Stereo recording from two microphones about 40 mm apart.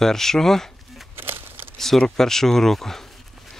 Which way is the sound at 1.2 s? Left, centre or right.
Right.